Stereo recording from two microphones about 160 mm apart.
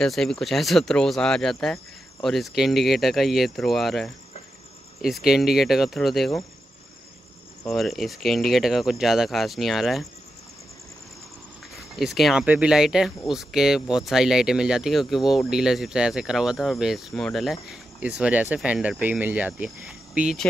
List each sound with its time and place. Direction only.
0.0 s speech: 5° left (ahead or behind)
7.6 s speech: centre (ahead or behind)
12.0 s speech: centre (ahead or behind)